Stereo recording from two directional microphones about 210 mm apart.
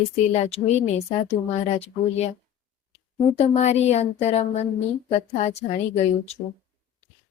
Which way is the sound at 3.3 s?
30° left (ahead or behind).